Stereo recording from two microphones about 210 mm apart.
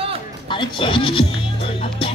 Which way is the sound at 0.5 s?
25° left (ahead or behind).